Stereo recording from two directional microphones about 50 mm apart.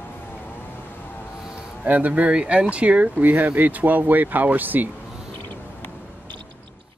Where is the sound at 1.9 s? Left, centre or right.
Right.